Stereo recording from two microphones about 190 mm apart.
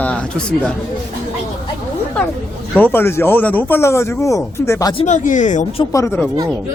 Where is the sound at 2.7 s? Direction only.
10° left (ahead or behind).